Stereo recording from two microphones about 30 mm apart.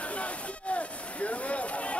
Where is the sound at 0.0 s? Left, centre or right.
Left.